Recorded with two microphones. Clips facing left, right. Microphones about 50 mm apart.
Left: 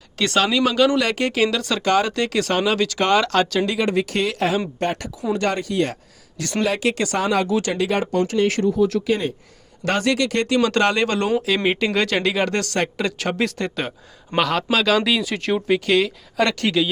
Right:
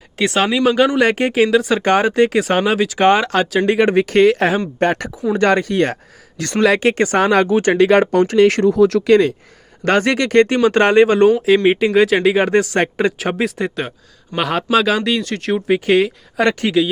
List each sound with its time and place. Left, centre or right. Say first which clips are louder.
0.2 s speech: right 3 dB; centre
1.8 s speech: right 6 dB; right
3.7 s speech: right 7 dB; right
6.7 s speech: right 6 dB; right
7.2 s speech: right 7 dB; right
7.4 s speech: right 5 dB; right
7.7 s speech: right 9 dB; right
9.8 s speech: right 5 dB; right
10.6 s speech: right 7 dB; right
13.1 s speech: right 3 dB; centre
14.3 s speech: right 3 dB; centre
15.0 s speech: right 2 dB; centre
15.5 s speech: right 4 dB; centre
16.6 s speech: right 4 dB; centre